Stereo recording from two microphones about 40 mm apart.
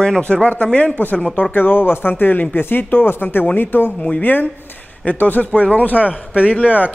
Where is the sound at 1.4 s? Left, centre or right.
Left.